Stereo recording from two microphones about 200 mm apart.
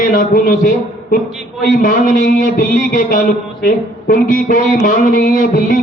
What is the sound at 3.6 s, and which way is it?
Speech, 40° left (ahead or behind).